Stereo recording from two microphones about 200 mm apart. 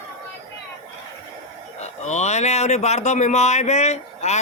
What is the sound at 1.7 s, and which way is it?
Speech, 35° left (ahead or behind).